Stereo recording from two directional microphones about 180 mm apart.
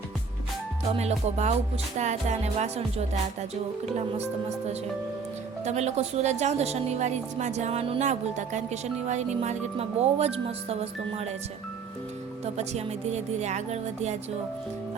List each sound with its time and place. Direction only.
0.9 s speech: 35° right (ahead or behind)
5.6 s speech: 40° right (ahead or behind)
12.5 s speech: 40° right (ahead or behind)